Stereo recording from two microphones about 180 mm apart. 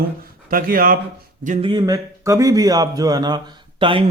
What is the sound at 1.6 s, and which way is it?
A man's voice, 25° right (ahead or behind).